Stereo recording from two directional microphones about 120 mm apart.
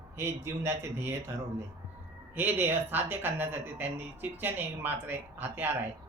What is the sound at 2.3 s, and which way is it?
Speech, 15° right (ahead or behind).